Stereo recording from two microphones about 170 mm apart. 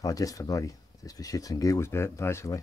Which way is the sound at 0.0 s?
20° left (ahead or behind).